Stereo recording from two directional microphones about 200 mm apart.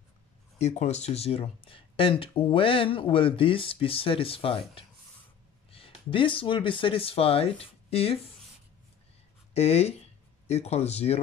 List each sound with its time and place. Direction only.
0.6 s speech: 35° left (ahead or behind)
9.5 s speech: 30° left (ahead or behind)